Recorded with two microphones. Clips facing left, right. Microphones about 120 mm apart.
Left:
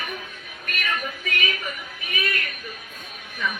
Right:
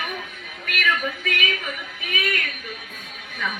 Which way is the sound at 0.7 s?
85° right.